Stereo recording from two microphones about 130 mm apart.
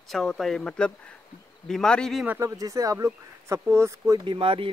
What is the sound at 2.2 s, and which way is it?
Speech, 20° right (ahead or behind).